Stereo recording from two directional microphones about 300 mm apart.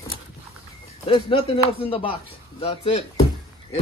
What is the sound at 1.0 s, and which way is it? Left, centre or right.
Speech, centre.